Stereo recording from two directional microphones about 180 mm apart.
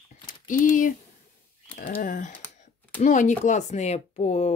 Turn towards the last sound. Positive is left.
turn(degrees=40)  # may be behind; listen again after turning